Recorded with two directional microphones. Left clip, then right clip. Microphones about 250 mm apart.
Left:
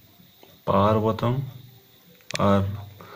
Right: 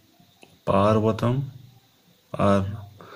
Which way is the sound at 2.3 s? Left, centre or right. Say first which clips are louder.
Even; centre.